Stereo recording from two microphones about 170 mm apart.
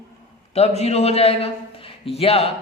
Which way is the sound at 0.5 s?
40° left (ahead or behind).